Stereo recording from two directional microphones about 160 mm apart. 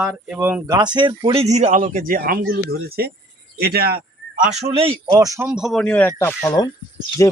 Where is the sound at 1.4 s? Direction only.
45° right (ahead or behind).